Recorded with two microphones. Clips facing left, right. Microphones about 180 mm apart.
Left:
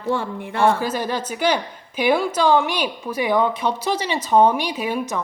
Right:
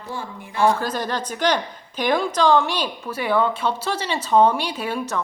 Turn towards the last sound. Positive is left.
turn(degrees=10)  # may be behind; listen again after turning